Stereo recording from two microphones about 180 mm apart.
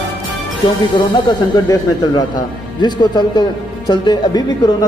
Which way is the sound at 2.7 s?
25° left (ahead or behind).